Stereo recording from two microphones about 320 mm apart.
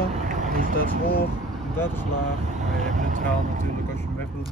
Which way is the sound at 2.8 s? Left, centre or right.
Right.